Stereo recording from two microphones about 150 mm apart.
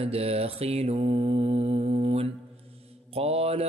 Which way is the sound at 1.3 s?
35° right (ahead or behind).